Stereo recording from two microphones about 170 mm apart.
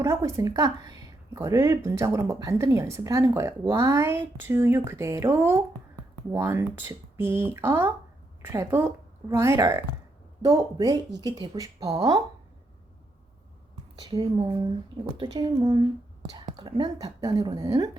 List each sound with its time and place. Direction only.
0.0 s speech: 15° right (ahead or behind)
13.9 s speech: 25° right (ahead or behind)